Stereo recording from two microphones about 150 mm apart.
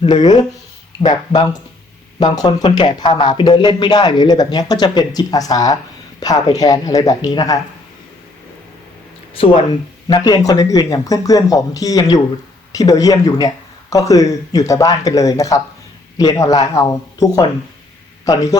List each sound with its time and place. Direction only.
0.0 s speech: 25° left (ahead or behind)
9.4 s speech: 35° left (ahead or behind)
10.1 s speech: 25° left (ahead or behind)